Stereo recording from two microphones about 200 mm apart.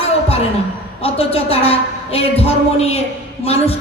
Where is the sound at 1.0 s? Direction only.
30° left (ahead or behind).